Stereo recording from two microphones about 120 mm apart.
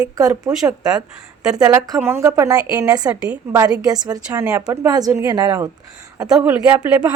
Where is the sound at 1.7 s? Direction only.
30° right (ahead or behind).